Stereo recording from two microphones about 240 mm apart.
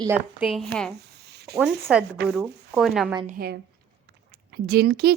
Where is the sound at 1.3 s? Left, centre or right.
Right.